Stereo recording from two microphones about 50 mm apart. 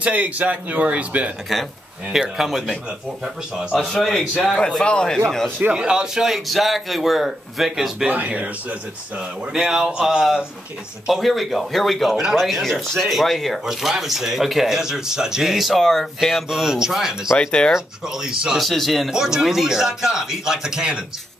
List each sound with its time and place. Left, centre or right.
0.0 s speech: right
2.1 s speech: centre
5.8 s speech: centre
8.1 s speech: right
9.7 s speech: centre
15.5 s speech: centre
16.4 s speech: centre
17.4 s speech: centre
17.7 s speech: centre
18.6 s speech: centre
19.0 s speech: centre